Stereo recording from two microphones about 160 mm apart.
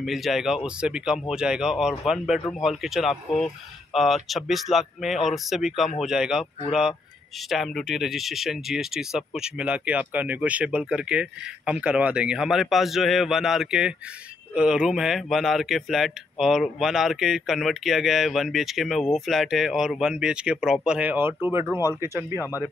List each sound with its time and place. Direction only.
0.0 s speech: centre (ahead or behind); by 22.4 s 15° right (ahead or behind)